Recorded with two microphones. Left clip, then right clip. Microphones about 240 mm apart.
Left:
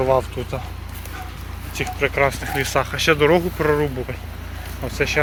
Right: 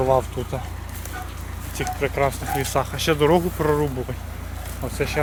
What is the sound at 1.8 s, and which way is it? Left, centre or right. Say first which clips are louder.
Speech: left 3 dB; centre.